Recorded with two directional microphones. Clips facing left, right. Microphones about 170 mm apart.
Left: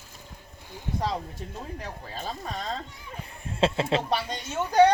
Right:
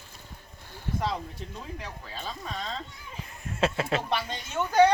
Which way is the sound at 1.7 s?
45° left (ahead or behind).